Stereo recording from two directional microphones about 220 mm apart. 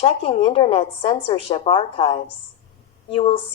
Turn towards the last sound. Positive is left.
turn(degrees=25)  # may be behind; listen again after turning